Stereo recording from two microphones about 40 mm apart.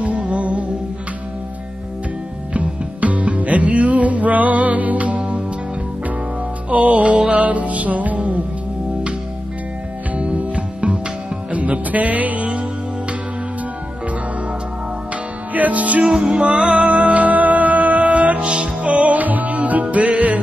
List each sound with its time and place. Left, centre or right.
0.0 s music: right
2.5 s music: right
6.7 s music: right
10.1 s music: right
15.5 s music: right
16.1 s music: right